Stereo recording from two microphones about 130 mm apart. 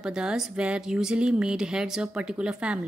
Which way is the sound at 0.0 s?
5° right (ahead or behind).